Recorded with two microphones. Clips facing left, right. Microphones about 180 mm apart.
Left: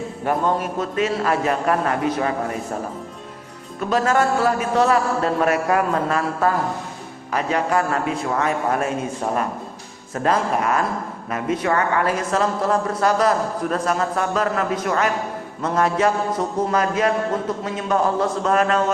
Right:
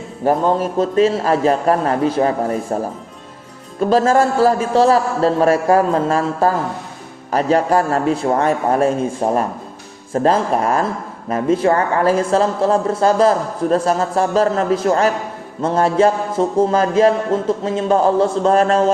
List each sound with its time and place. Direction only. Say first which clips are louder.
0.3 s a man's voice: right 6 dB; 30° right (ahead or behind)
3.8 s a man's voice: right 5 dB; 30° right (ahead or behind)